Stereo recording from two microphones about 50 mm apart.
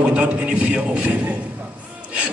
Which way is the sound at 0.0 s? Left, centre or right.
Right.